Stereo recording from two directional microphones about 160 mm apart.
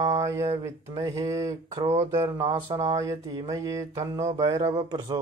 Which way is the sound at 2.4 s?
30° right (ahead or behind).